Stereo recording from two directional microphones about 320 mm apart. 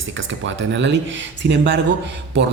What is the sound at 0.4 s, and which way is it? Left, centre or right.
Speech, right.